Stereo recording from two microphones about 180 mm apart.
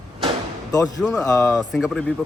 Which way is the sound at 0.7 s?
20° left (ahead or behind).